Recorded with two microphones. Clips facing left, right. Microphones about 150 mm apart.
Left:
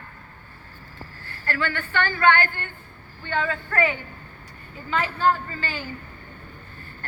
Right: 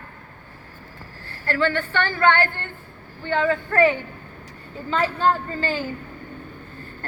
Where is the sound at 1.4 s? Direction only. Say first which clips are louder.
Right 6 dB; 25° right (ahead or behind).